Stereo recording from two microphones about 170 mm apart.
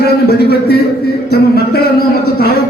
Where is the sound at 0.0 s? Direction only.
70° left (ahead or behind).